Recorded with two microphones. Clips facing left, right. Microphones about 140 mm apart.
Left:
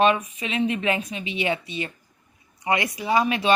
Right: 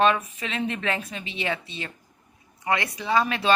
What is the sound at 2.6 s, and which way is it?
Speech, 15° left (ahead or behind).